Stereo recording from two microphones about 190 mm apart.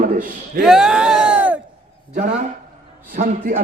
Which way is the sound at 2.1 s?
55° right (ahead or behind).